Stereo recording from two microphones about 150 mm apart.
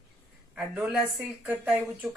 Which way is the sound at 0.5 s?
10° right (ahead or behind).